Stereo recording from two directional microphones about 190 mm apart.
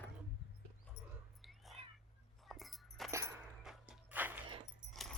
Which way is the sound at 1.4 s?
Centre (ahead or behind).